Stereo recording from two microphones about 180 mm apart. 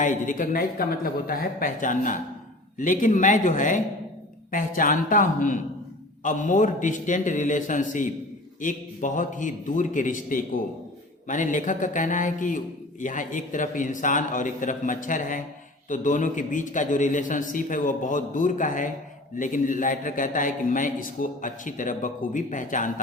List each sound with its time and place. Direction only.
0.0 s a man's voice: 45° left (ahead or behind)